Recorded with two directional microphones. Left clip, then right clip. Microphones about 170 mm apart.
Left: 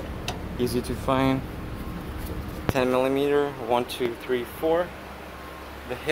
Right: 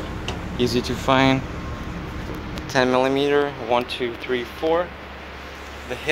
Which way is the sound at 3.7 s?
25° left (ahead or behind).